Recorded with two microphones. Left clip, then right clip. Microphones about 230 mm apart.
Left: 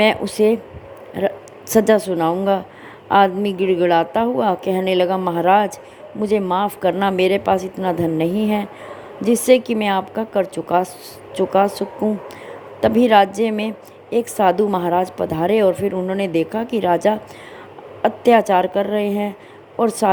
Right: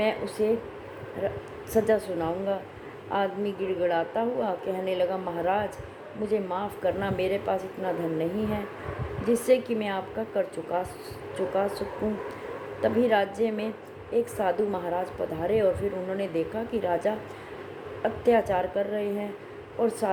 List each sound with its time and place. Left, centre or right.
0.0 s a woman's voice: left
1.9 s a woman's voice: left
12.8 s a woman's voice: left